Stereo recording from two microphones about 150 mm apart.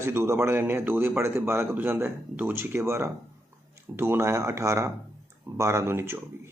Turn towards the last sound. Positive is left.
turn(degrees=-15)  # may be behind; listen again after turning